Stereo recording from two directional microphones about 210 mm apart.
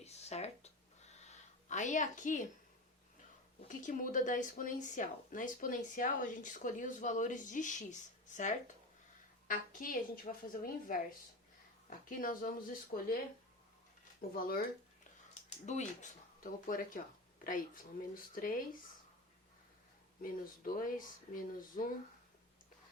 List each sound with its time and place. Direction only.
0.0 s a sound: 30° left (ahead or behind)
3.7 s speech: 40° left (ahead or behind)
14.2 s speech: 45° left (ahead or behind)
15.6 s speech: 35° left (ahead or behind)
20.2 s speech: 40° left (ahead or behind)